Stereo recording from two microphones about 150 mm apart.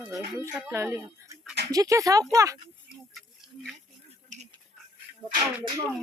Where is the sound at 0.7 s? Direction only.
15° right (ahead or behind).